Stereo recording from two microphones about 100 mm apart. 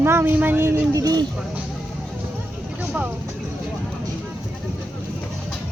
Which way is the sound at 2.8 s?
15° right (ahead or behind).